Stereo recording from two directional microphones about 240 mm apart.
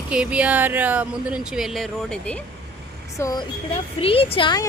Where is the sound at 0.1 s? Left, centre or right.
Centre.